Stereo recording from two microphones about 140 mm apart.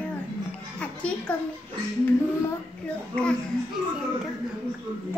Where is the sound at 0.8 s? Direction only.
10° left (ahead or behind).